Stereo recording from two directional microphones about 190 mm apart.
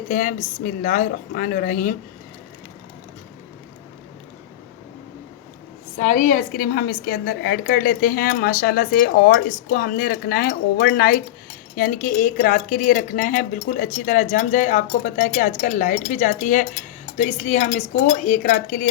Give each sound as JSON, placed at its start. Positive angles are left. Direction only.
{"t": 0.1, "sound": "a woman's voice", "side_deg": 45}
{"t": 6.0, "sound": "a woman's voice", "side_deg": 40}